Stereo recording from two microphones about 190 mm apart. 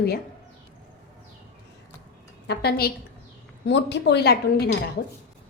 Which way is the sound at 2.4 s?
55° left (ahead or behind).